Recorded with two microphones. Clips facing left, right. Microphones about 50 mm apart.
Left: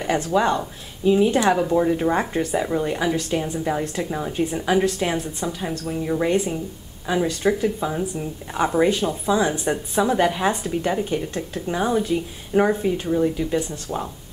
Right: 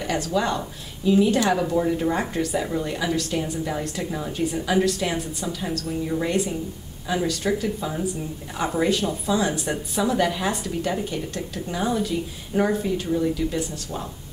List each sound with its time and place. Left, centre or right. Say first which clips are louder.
0.0 s speech: left 4 dB; left